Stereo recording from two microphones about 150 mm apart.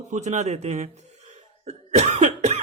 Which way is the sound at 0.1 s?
50° right (ahead or behind).